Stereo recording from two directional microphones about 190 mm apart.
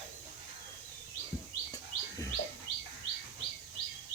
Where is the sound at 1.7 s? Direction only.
20° left (ahead or behind).